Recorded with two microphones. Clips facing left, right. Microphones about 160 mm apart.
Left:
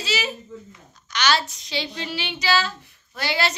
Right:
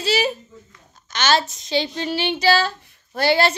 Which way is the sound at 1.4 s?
45° right (ahead or behind).